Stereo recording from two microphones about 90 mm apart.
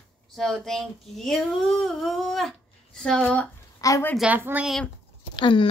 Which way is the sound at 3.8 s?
40° left (ahead or behind).